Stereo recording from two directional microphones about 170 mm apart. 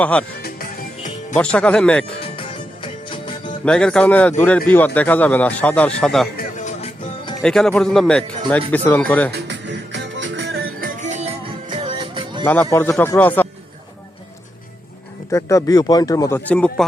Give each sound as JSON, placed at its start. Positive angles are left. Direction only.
{"t": 0.0, "sound": "a man's voice", "side_deg": 10}
{"t": 0.4, "sound": "music", "side_deg": 55}
{"t": 1.4, "sound": "a man's voice", "side_deg": 5}
{"t": 2.3, "sound": "music", "side_deg": 30}
{"t": 3.7, "sound": "a man's voice", "side_deg": 5}
{"t": 6.6, "sound": "music", "side_deg": 45}
{"t": 7.4, "sound": "a man's voice", "side_deg": 5}
{"t": 9.5, "sound": "music", "side_deg": -90}
{"t": 12.5, "sound": "a man's voice", "side_deg": 10}
{"t": 15.3, "sound": "speech", "side_deg": 20}
{"t": 16.5, "sound": "a man's voice", "side_deg": 5}